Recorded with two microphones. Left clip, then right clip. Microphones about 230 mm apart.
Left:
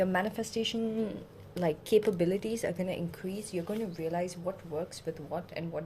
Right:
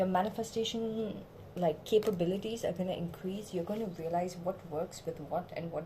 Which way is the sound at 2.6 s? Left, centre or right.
Left.